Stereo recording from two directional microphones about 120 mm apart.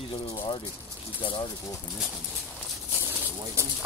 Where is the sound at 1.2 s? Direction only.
45° left (ahead or behind).